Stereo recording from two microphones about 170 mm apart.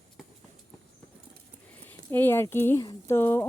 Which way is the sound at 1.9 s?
10° left (ahead or behind).